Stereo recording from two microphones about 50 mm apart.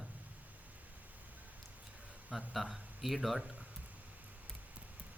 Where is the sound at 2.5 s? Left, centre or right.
Centre.